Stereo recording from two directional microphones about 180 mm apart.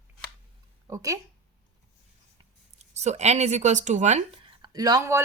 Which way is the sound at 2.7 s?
40° right (ahead or behind).